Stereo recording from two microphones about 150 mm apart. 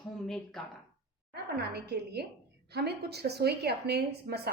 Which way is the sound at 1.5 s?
90° right.